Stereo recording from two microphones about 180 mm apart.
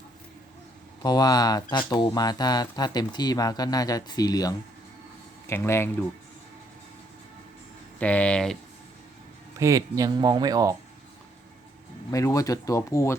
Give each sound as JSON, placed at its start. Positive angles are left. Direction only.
{"t": 1.0, "sound": "speech", "side_deg": 20}
{"t": 7.9, "sound": "speech", "side_deg": 10}
{"t": 9.6, "sound": "speech", "side_deg": -15}
{"t": 12.1, "sound": "speech", "side_deg": 15}